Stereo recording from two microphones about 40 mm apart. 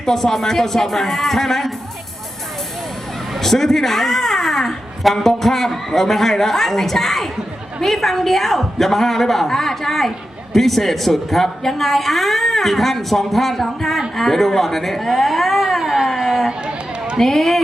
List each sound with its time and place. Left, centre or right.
0.0 s speech: centre
3.3 s a woman's voice: centre
15.8 s a sound: centre
16.0 s a sound: centre
16.5 s run: centre
17.2 s a woman's voice: centre